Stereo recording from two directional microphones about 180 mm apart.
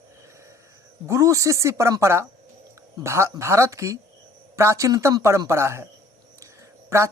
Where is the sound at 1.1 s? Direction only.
15° right (ahead or behind).